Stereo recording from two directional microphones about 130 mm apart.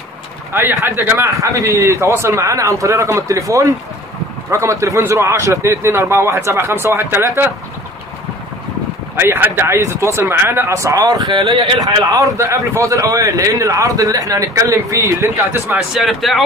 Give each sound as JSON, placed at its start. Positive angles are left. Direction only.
{"t": 0.5, "sound": "a man's voice", "side_deg": -15}
{"t": 9.1, "sound": "a man's voice", "side_deg": -20}
{"t": 11.3, "sound": "speech", "side_deg": -45}
{"t": 11.8, "sound": "a man's voice", "side_deg": -25}
{"t": 15.9, "sound": "speech", "side_deg": 0}